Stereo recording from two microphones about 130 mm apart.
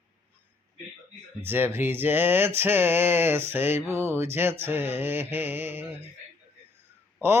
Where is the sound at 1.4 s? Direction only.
15° right (ahead or behind).